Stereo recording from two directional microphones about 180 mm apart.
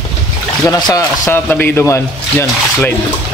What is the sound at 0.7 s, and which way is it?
A man's voice, 20° left (ahead or behind).